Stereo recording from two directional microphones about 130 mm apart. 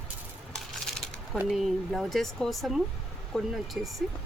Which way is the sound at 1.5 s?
Centre (ahead or behind).